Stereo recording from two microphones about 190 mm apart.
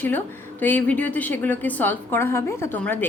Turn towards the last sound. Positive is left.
turn(degrees=10)  # may be behind; listen again after turning